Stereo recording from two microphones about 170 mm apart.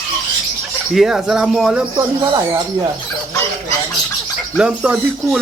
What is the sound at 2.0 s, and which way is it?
Speech, 20° right (ahead or behind).